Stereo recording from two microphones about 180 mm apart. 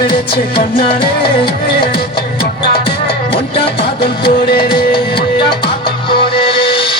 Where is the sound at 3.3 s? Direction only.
30° left (ahead or behind).